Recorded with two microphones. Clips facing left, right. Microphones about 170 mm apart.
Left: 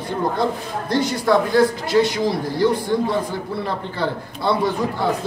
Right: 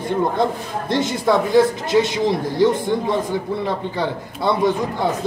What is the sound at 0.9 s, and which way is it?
A man's voice, 25° right (ahead or behind).